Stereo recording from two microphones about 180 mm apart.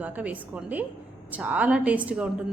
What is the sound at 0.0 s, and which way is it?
A woman's voice, 10° right (ahead or behind).